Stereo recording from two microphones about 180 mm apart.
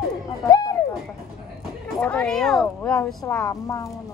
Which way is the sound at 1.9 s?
5° left (ahead or behind).